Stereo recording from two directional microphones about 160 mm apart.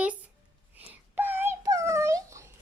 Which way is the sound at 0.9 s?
10° right (ahead or behind).